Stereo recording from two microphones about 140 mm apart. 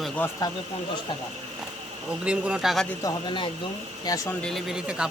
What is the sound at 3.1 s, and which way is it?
Speech, 35° left (ahead or behind).